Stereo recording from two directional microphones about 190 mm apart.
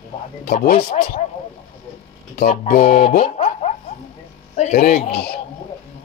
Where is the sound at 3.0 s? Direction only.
30° left (ahead or behind); by 5.4 s 60° left (ahead or behind).